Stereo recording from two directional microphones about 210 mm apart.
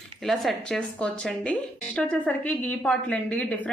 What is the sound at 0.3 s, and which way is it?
A woman's voice, centre (ahead or behind).